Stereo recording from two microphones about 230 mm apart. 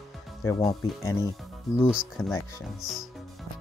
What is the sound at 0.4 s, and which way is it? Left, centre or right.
Speech, centre.